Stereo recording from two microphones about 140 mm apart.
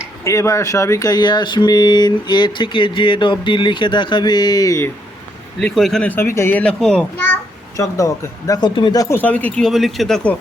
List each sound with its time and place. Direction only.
0.3 s speech: 20° left (ahead or behind)
5.5 s a child's voice: 5° left (ahead or behind)
7.8 s speech: 20° left (ahead or behind)
9.1 s speech: 10° left (ahead or behind)